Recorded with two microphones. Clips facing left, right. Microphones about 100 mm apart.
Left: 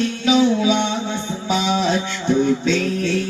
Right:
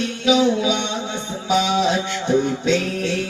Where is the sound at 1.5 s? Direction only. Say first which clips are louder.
Right 1 dB; 15° right (ahead or behind).